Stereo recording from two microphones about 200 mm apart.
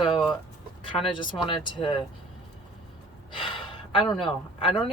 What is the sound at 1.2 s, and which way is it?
Speech, 25° left (ahead or behind).